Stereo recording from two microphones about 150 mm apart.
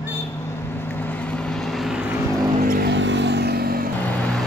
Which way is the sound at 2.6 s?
75° right (ahead or behind).